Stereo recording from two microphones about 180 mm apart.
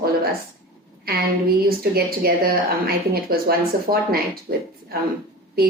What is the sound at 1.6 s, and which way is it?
A woman's voice, 55° right (ahead or behind).